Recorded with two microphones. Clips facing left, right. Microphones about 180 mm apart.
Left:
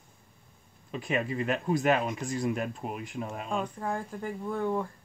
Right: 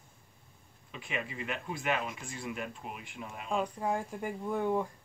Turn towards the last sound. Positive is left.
turn(degrees=-15)  # may be behind; listen again after turning